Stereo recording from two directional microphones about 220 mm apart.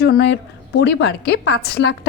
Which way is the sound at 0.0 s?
50° left (ahead or behind).